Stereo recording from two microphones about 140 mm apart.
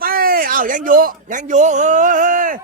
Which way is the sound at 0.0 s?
90° right.